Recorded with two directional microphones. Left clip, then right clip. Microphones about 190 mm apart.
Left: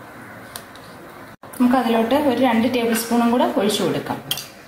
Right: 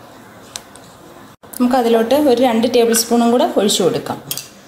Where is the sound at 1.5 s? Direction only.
50° right (ahead or behind).